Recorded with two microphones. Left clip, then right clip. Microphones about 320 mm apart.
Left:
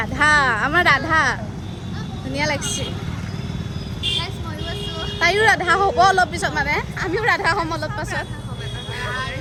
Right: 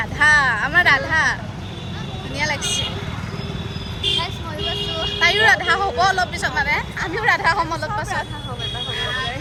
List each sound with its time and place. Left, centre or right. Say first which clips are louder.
0.0 s vehicle: right 1 dB; left
4.7 s vehicle: right 5 dB; centre
5.2 s speech: right 1 dB; centre